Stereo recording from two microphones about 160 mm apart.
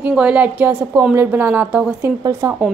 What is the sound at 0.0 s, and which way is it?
A woman's voice, 5° right (ahead or behind).